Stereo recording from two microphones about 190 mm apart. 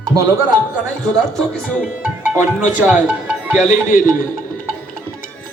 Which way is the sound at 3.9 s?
45° left (ahead or behind).